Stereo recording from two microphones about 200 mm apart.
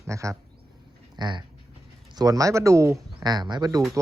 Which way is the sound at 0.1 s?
15° right (ahead or behind).